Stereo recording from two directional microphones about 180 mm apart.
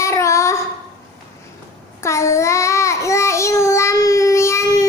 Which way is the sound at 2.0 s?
15° left (ahead or behind).